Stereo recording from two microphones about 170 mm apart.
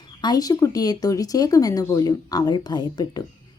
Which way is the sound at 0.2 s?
25° left (ahead or behind).